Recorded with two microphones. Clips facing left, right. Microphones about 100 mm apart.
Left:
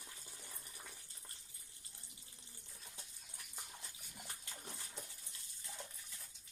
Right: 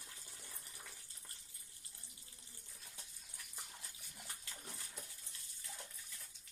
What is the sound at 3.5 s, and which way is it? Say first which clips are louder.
Dog: left 2 dB; 20° left (ahead or behind).